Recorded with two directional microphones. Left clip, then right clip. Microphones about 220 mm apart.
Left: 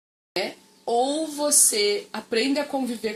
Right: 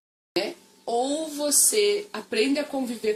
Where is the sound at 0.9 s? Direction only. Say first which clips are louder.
Left 3 dB; 20° left (ahead or behind).